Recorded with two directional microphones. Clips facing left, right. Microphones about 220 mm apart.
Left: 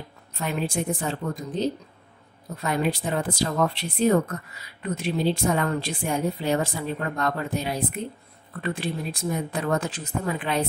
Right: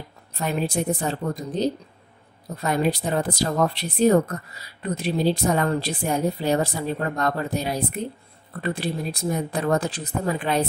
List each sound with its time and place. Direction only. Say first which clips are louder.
0.4 s speech: right 2 dB; 40° right (ahead or behind)